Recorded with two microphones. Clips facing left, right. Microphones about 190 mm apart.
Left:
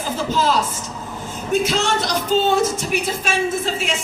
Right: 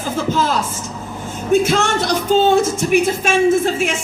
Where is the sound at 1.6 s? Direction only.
50° right (ahead or behind).